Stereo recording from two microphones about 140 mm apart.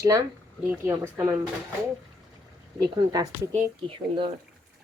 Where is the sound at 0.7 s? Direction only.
15° right (ahead or behind).